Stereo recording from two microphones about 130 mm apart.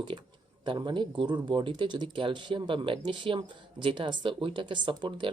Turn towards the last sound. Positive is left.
turn(degrees=-40)  # may be behind; listen again after turning